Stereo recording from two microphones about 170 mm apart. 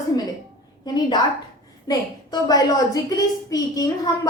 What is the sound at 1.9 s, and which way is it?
A child's voice, 20° left (ahead or behind).